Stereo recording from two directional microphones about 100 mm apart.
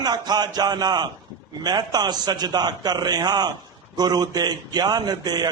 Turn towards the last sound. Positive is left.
turn(degrees=-45)  # may be behind; listen again after turning